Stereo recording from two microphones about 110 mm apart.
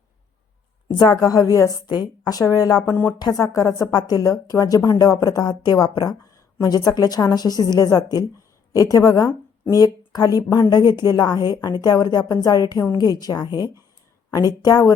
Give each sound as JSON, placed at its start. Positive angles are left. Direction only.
{"t": 0.9, "sound": "a woman's voice", "side_deg": 40}
{"t": 2.9, "sound": "speech", "side_deg": 20}
{"t": 3.2, "sound": "a woman's voice", "side_deg": 35}